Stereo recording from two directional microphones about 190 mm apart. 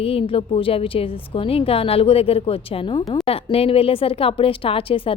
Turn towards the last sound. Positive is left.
turn(degrees=30)  # may be behind; listen again after turning